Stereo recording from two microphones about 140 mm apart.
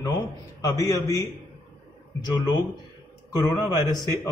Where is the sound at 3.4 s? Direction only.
25° left (ahead or behind).